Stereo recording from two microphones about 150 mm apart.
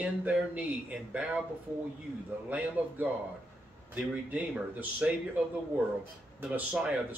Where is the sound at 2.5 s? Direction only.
10° right (ahead or behind).